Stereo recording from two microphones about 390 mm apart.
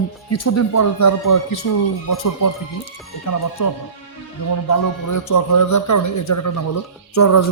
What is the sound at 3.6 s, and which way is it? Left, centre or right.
A man's voice, left.